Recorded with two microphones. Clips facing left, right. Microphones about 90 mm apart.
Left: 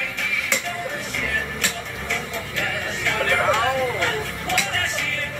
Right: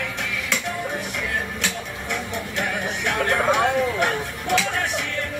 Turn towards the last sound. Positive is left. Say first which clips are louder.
# right 2 dB
turn(degrees=-20)  # may be behind; listen again after turning